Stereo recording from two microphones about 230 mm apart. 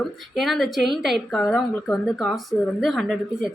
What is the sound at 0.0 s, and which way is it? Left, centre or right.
Speech, centre.